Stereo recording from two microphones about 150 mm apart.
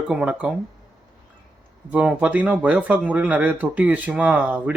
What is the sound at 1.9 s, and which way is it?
Speech, 10° right (ahead or behind).